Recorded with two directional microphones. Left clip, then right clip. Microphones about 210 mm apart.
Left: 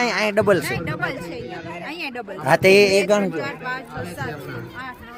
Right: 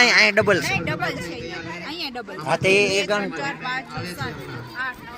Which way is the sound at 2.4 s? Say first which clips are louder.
Left 5 dB; 55° left (ahead or behind).